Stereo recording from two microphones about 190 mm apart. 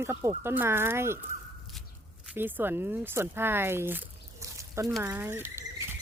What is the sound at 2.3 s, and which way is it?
Speech, 10° right (ahead or behind).